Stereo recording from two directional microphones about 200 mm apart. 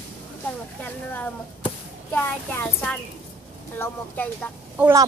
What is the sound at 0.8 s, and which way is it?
Speech, 10° left (ahead or behind).